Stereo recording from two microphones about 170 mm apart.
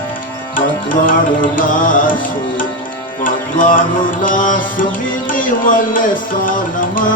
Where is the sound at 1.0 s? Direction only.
55° left (ahead or behind).